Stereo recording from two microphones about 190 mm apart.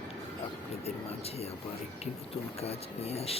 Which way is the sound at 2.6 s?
35° left (ahead or behind).